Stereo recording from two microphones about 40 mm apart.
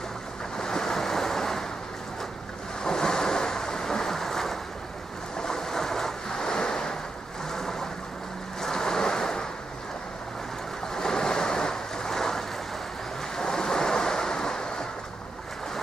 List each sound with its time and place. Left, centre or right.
0.6 s waves: centre
2.8 s ocean: centre
5.4 s waves: centre
10.9 s waves: centre